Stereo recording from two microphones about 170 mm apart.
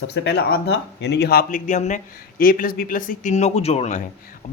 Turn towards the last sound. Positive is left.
turn(degrees=40)  # may be behind; listen again after turning